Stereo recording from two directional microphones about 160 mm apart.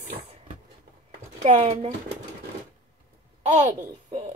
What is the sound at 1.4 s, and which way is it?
Speech, 40° right (ahead or behind).